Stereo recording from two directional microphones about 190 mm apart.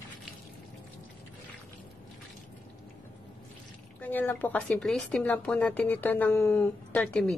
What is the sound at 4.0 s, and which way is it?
Speech, 10° left (ahead or behind).